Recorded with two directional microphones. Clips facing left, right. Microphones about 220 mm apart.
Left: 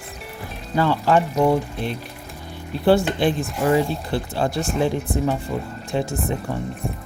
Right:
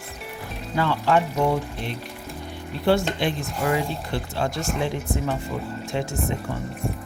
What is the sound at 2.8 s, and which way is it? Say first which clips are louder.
Speech: left 4 dB; 35° left (ahead or behind).